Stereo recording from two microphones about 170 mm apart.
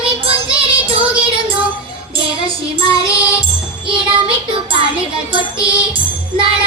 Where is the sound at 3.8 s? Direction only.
30° right (ahead or behind).